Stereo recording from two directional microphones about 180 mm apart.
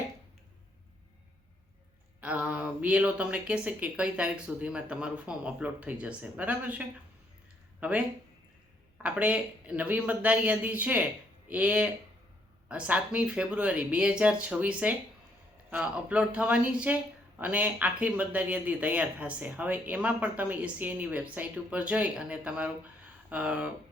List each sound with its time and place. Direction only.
2.2 s speech: 5° right (ahead or behind)
9.0 s speech: 5° right (ahead or behind)